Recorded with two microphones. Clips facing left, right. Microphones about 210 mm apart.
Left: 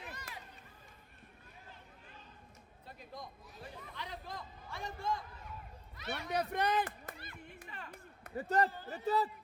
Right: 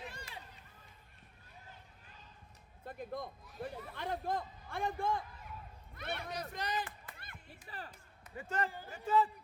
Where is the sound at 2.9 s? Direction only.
55° right (ahead or behind).